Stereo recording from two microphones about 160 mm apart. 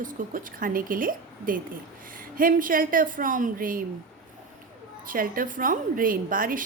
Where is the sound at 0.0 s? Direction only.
60° right (ahead or behind).